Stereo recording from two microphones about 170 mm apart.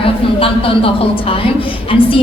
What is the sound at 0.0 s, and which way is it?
A woman's voice, 35° left (ahead or behind).